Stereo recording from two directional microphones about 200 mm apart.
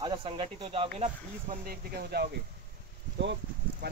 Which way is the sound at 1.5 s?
50° right (ahead or behind).